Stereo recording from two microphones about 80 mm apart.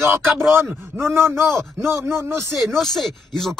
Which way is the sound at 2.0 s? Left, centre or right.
Right.